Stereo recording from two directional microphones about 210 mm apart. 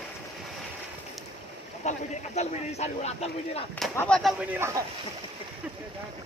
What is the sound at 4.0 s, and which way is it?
Speech, 5° left (ahead or behind).